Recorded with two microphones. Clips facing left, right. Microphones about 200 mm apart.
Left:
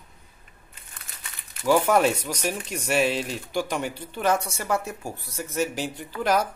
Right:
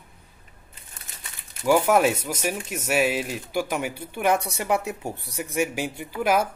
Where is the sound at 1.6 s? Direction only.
5° right (ahead or behind).